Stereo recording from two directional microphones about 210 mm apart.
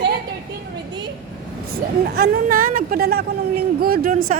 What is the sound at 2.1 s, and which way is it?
A woman's voice, 45° right (ahead or behind).